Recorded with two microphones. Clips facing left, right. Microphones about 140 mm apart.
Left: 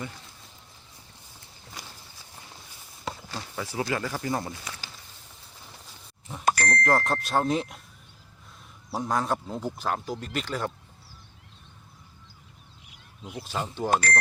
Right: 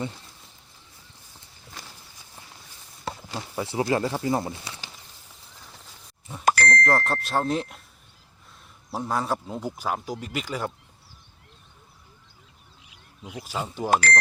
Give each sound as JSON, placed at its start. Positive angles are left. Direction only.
{"t": 3.5, "sound": "speech", "side_deg": -25}
{"t": 6.4, "sound": "a sound", "side_deg": -90}
{"t": 6.7, "sound": "speech", "side_deg": 5}
{"t": 8.9, "sound": "speech", "side_deg": 0}
{"t": 13.2, "sound": "speech", "side_deg": -10}